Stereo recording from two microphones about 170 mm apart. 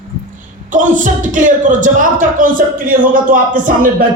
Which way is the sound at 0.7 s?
50° right (ahead or behind).